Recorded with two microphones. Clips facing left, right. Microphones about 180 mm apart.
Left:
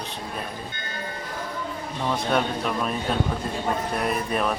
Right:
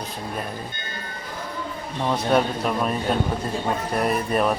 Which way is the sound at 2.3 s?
5° right (ahead or behind).